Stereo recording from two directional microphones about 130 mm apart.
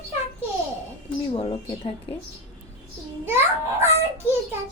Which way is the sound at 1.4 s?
45° left (ahead or behind).